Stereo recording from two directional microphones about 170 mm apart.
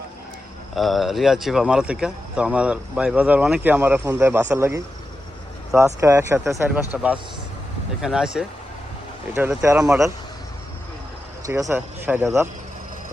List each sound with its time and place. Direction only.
0.8 s speech: centre (ahead or behind)
11.4 s speech: 20° right (ahead or behind)